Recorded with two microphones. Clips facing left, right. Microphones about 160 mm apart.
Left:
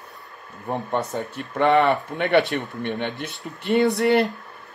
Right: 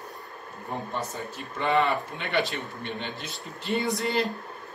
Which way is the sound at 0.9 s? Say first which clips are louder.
Left 7 dB; 65° left (ahead or behind).